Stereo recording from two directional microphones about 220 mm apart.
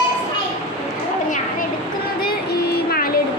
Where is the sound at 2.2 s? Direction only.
45° left (ahead or behind).